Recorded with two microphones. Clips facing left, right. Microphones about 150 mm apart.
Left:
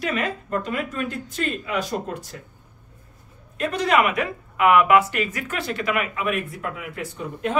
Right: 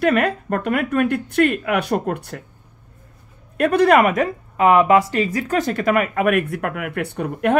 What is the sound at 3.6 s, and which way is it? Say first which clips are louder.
Speech: right 7 dB; 60° right (ahead or behind).